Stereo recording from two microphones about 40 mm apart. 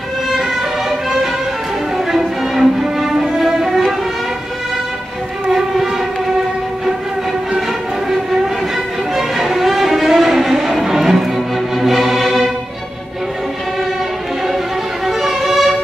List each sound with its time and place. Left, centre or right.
0.3 s music: centre
9.1 s music: centre
15.0 s violin: centre